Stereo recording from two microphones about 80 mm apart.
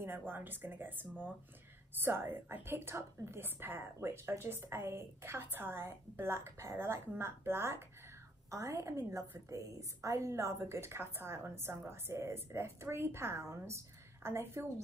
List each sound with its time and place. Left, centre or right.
0.3 s a woman's voice: right